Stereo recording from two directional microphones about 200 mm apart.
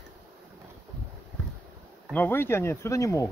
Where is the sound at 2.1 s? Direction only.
10° left (ahead or behind).